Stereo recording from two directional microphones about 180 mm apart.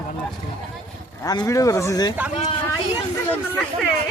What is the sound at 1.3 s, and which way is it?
Speech, 20° left (ahead or behind).